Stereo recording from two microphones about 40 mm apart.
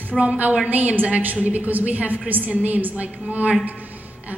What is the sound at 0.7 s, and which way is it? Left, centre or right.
A woman's voice, right.